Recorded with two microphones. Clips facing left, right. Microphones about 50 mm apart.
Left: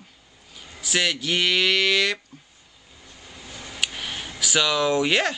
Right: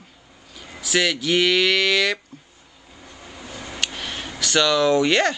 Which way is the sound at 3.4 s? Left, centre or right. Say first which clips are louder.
Right 4 dB; right.